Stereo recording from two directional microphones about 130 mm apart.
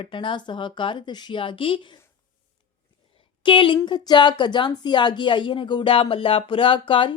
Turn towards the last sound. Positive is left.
turn(degrees=40)  # may be behind; listen again after turning